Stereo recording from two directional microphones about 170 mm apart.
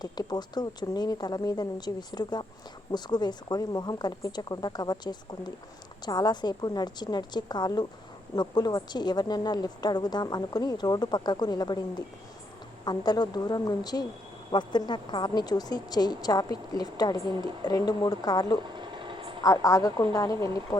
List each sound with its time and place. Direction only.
0.0 s a woman's voice: 25° left (ahead or behind)
18.8 s vehicle: 30° right (ahead or behind)
19.4 s a woman's voice: 20° left (ahead or behind)